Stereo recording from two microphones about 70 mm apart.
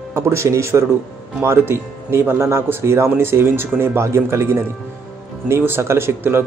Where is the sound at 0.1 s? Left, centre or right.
Right.